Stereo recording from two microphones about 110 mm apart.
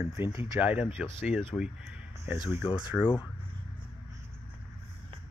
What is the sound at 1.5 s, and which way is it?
Speech, 20° left (ahead or behind).